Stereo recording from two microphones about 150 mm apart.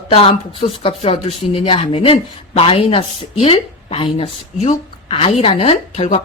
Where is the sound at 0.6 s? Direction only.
55° left (ahead or behind).